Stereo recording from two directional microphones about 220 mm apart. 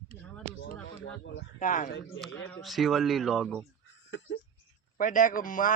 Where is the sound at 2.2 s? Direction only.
Centre (ahead or behind).